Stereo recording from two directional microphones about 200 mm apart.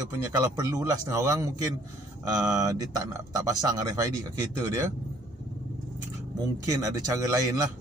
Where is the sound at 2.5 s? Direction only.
15° right (ahead or behind).